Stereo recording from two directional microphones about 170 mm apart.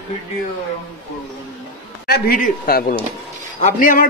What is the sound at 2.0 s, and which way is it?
Speech, 60° left (ahead or behind).